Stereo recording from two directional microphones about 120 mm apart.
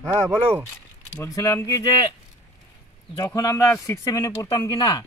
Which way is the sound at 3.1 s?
25° left (ahead or behind).